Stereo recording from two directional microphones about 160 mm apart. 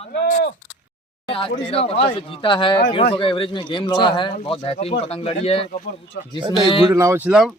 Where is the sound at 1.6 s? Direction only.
35° left (ahead or behind).